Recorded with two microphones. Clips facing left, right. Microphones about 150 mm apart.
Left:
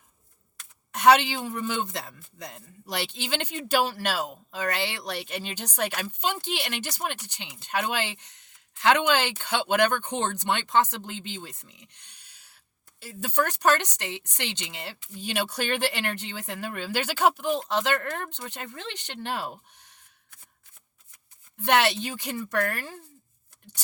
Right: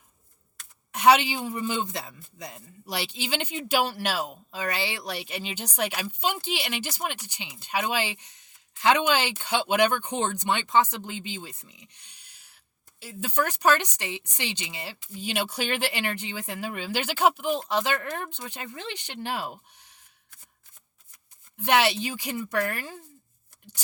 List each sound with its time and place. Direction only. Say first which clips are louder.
0.9 s speech: even; 10° right (ahead or behind)
12.0 s a sound: even; 60° left (ahead or behind)
13.0 s speech: left 1 dB; 5° right (ahead or behind)
21.6 s speech: even; 10° right (ahead or behind)